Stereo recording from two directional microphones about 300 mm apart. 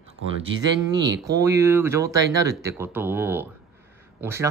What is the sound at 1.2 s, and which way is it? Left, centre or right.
Speech, centre.